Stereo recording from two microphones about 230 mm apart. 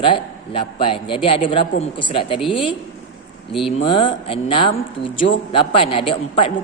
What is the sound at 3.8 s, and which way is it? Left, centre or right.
A man's voice, left.